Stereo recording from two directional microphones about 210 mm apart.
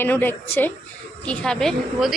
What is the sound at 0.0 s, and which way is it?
A woman's voice, 10° left (ahead or behind).